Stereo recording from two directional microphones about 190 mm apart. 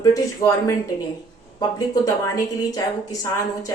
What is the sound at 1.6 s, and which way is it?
A woman's voice, 20° left (ahead or behind).